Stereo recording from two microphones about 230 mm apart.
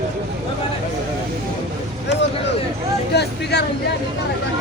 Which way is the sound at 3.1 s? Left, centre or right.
Left.